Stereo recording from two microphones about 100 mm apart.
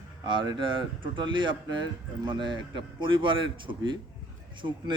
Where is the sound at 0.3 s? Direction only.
50° right (ahead or behind).